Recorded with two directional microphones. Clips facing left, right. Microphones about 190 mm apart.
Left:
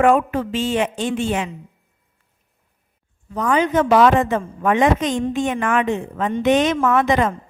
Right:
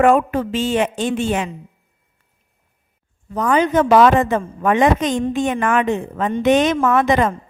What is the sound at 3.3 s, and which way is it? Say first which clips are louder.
A woman's voice: right 2 dB; 40° right (ahead or behind).